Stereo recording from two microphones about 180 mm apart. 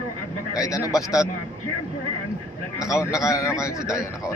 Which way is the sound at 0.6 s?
20° left (ahead or behind).